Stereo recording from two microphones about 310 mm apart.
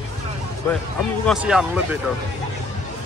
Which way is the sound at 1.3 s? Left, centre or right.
Centre.